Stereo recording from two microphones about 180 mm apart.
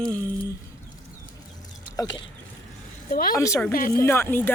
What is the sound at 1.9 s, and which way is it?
Speech, 20° left (ahead or behind).